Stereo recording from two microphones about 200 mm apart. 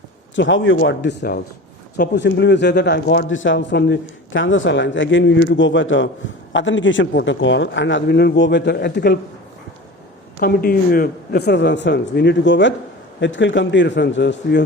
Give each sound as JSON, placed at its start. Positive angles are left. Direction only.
{"t": 0.3, "sound": "speech", "side_deg": 65}
{"t": 10.4, "sound": "speech", "side_deg": 50}